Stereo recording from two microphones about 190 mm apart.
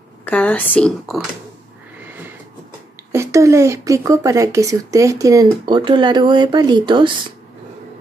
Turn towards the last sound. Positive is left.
turn(degrees=-25)  # may be behind; listen again after turning